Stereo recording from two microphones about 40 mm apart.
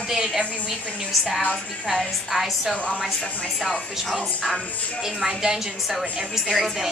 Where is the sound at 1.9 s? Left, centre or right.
Centre.